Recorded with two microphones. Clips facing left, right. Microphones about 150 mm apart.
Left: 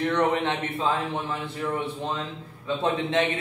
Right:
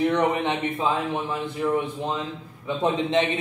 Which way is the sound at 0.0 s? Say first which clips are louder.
Right 2 dB; 15° right (ahead or behind).